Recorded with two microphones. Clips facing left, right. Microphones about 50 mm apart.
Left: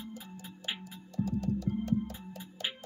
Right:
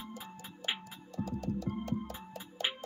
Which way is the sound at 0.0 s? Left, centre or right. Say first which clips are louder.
Left 1 dB; right.